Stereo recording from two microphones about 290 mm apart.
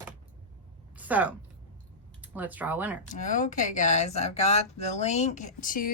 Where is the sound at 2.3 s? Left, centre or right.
Centre.